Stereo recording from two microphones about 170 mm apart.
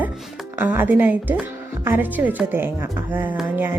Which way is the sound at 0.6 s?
10° right (ahead or behind).